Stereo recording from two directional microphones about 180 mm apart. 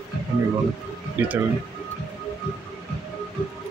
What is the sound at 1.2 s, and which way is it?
Speech, 10° right (ahead or behind).